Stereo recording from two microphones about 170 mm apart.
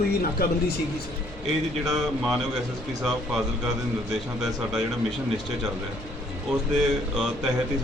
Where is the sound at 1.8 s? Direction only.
Centre (ahead or behind).